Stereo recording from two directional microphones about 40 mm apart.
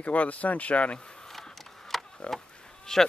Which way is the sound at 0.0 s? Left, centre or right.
Left.